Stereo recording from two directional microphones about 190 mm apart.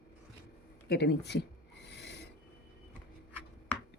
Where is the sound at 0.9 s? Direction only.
60° left (ahead or behind).